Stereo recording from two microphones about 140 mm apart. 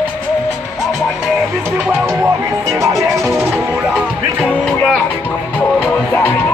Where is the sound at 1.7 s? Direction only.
5° right (ahead or behind).